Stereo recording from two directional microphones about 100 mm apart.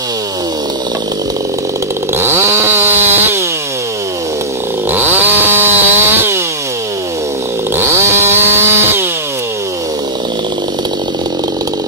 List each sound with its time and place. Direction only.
2.1 s chainsaw: 25° right (ahead or behind)
4.9 s chainsaw: 20° right (ahead or behind)
7.7 s chainsaw: 25° right (ahead or behind)